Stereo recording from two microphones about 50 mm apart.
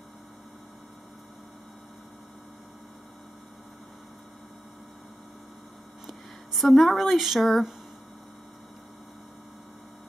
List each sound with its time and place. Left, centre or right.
6.0 s speech: centre